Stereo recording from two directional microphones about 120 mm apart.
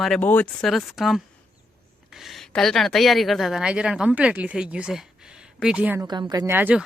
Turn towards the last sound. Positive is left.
turn(degrees=-15)  # may be behind; listen again after turning